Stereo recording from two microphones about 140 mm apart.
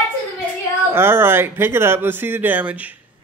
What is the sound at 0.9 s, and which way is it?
Speech, 15° right (ahead or behind).